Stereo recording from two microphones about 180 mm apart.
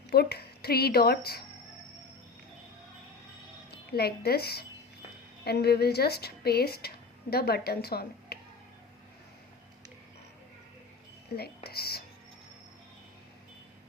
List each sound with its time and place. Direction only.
0.1 s a woman's voice: 60° left (ahead or behind)
3.7 s a woman's voice: 60° left (ahead or behind)
11.3 s speech: 60° left (ahead or behind)